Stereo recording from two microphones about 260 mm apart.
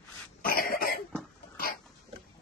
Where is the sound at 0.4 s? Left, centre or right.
Left.